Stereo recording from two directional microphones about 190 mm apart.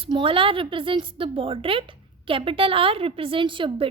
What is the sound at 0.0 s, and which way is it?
A woman's voice, 30° right (ahead or behind).